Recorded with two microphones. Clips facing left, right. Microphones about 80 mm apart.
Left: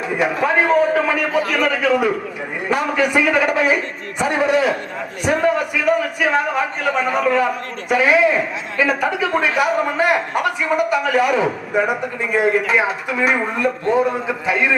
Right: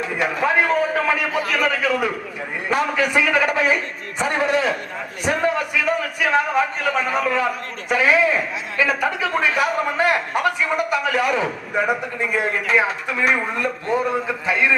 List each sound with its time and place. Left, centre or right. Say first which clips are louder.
0.0 s a man's voice: left 2 dB; centre
5.2 s a sound: left 3 dB; centre
6.2 s a man's voice: right 2 dB; centre